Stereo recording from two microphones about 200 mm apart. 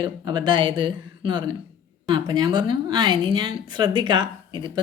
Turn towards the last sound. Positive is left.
turn(degrees=-20)  # may be behind; listen again after turning